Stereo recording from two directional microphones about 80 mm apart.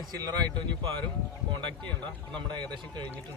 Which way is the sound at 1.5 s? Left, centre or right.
Right.